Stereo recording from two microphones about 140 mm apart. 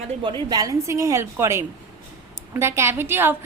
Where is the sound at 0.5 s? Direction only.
25° right (ahead or behind).